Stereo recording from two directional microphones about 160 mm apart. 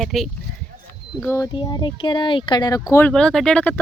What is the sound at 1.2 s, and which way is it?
Speech, 20° left (ahead or behind).